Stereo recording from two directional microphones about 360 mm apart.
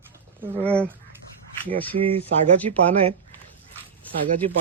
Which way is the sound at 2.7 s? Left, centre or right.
Centre.